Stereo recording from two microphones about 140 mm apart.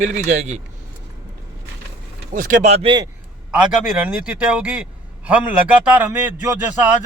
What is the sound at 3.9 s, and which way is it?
A man's voice, 5° right (ahead or behind).